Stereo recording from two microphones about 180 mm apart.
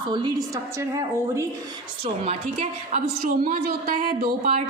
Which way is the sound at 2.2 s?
40° right (ahead or behind).